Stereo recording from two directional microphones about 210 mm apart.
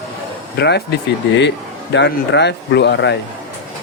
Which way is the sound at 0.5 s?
50° left (ahead or behind).